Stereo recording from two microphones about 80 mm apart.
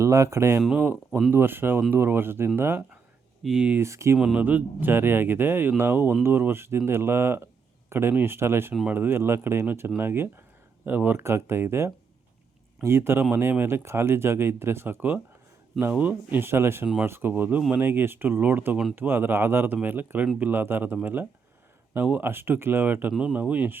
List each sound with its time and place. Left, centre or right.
0.0 s speech: right
3.4 s speech: centre
3.8 s speech: right
4.2 s speech: centre